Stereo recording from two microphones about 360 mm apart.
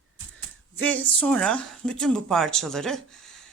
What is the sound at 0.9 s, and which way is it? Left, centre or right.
Speech, centre.